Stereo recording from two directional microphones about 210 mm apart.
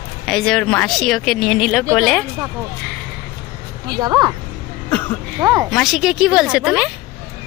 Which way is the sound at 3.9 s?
20° right (ahead or behind).